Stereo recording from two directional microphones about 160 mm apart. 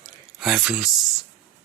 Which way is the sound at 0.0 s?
Centre (ahead or behind).